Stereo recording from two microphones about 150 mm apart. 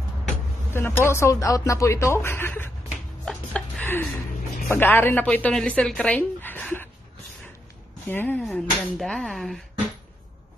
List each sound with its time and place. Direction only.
0.7 s a woman's voice: 15° left (ahead or behind)
3.3 s a sound: 10° left (ahead or behind)
4.6 s a woman's voice: 15° left (ahead or behind)
8.1 s a woman's voice: 15° left (ahead or behind)